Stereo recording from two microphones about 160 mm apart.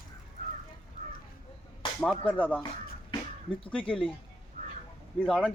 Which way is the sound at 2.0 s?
10° left (ahead or behind).